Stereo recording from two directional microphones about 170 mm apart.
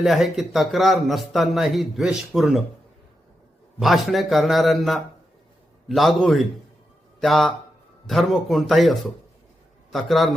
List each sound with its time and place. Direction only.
0.0 s speech: centre (ahead or behind)
3.8 s speech: centre (ahead or behind)